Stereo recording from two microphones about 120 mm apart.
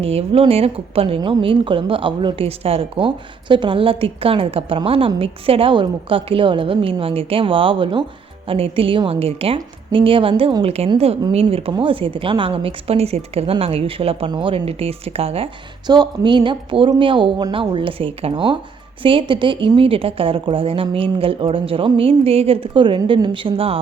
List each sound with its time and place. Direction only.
0.0 s a woman's voice: 55° right (ahead or behind)
15.9 s a woman's voice: 40° right (ahead or behind)